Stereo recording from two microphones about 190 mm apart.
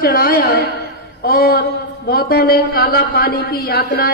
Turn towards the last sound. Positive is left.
turn(degrees=55)  # may be behind; listen again after turning